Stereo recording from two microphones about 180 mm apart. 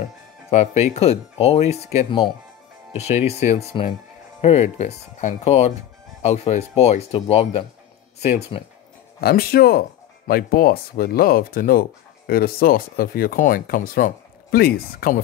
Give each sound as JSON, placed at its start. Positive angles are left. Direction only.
{"t": 0.5, "sound": "speech", "side_deg": 40}
{"t": 9.2, "sound": "speech", "side_deg": 60}